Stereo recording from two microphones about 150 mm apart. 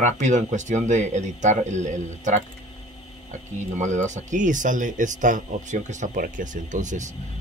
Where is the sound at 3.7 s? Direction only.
55° right (ahead or behind).